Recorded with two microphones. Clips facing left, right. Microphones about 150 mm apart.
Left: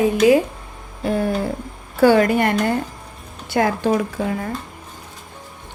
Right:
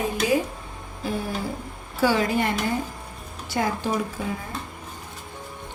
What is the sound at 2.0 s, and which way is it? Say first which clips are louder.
Speech: left 8 dB; 60° left (ahead or behind).